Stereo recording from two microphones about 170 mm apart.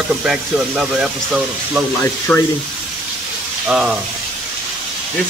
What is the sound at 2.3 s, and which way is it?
Speech, 10° left (ahead or behind).